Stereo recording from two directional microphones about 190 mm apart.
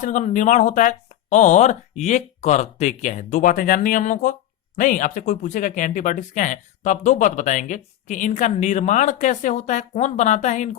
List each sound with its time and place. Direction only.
0.0 s speech: 40° left (ahead or behind)